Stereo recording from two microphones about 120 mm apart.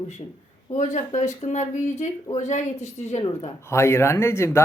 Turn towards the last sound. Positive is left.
turn(degrees=20)  # may be behind; listen again after turning